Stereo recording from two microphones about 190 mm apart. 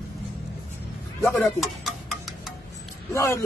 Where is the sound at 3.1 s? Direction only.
15° left (ahead or behind).